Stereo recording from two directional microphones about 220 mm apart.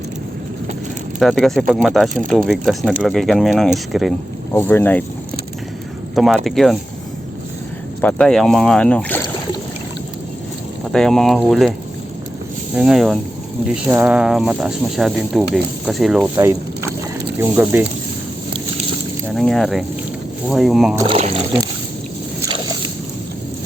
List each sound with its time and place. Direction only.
1.2 s speech: centre (ahead or behind)
6.1 s speech: centre (ahead or behind)
8.0 s speech: 5° left (ahead or behind)
10.9 s speech: centre (ahead or behind)
12.7 s speech: 5° right (ahead or behind)
19.3 s speech: 5° left (ahead or behind)
21.0 s speech: 25° right (ahead or behind)
22.4 s a sound: 25° right (ahead or behind)